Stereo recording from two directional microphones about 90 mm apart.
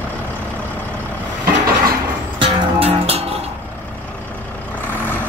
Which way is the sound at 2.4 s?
90° right.